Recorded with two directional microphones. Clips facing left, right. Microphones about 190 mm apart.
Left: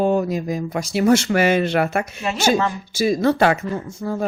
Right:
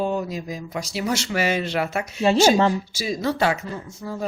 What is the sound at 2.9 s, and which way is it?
Speech, 55° left (ahead or behind).